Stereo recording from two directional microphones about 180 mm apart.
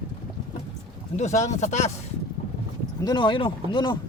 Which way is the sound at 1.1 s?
40° left (ahead or behind).